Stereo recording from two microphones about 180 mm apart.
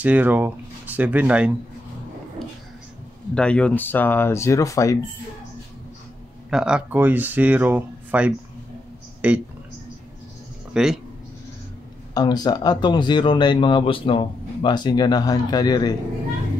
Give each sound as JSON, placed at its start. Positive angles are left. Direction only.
{"t": 0.0, "sound": "speech", "side_deg": -10}
{"t": 3.3, "sound": "speech", "side_deg": 5}
{"t": 6.5, "sound": "speech", "side_deg": -5}
{"t": 10.7, "sound": "speech", "side_deg": -5}
{"t": 12.1, "sound": "speech", "side_deg": 20}